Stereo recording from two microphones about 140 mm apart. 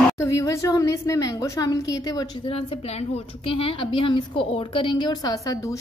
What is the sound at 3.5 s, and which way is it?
A woman's voice, 40° left (ahead or behind).